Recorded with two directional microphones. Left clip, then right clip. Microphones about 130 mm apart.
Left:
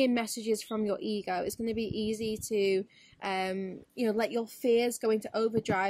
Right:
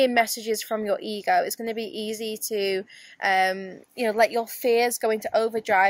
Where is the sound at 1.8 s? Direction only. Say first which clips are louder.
Right 3 dB; 55° right (ahead or behind).